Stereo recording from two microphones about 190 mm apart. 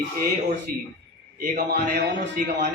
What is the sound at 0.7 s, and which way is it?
A man's voice, 50° right (ahead or behind).